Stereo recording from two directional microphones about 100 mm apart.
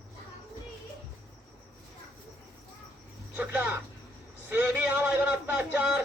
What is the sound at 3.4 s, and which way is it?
A man's voice, 15° right (ahead or behind).